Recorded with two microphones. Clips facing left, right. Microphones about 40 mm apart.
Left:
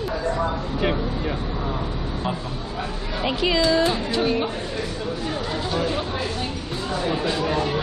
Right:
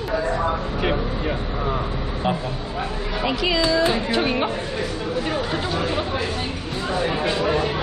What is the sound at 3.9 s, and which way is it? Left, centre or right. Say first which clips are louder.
Speech: right 1 dB; right.